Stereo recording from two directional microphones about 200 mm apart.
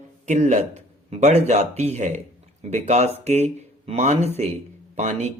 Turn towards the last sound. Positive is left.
turn(degrees=-35)  # may be behind; listen again after turning